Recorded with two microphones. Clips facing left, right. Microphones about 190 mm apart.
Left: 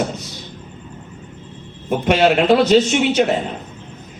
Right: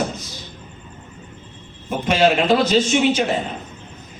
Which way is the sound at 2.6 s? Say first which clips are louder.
Left 3 dB; 65° left (ahead or behind).